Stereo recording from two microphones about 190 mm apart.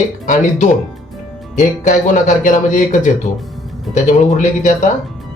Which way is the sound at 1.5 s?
40° left (ahead or behind).